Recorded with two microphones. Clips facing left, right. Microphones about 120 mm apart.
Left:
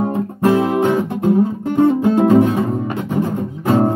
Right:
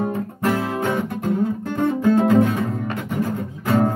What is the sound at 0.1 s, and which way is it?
Music, 25° left (ahead or behind).